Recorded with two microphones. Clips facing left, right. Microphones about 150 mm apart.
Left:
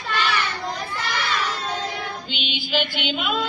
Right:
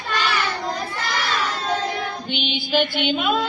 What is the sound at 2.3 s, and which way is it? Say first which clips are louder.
Music: right 4 dB; 40° right (ahead or behind).